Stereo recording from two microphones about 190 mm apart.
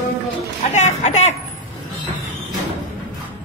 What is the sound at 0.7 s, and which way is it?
Speech, 35° left (ahead or behind).